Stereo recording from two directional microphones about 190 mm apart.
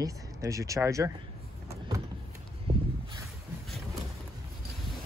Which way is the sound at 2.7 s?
25° right (ahead or behind).